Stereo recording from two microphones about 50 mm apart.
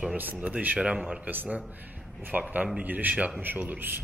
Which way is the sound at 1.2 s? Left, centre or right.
Right.